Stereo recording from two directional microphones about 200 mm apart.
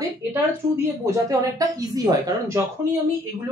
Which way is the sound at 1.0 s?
15° right (ahead or behind).